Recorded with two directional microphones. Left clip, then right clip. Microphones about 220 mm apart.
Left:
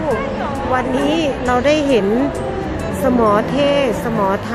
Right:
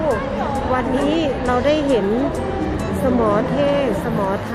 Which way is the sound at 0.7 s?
10° left (ahead or behind).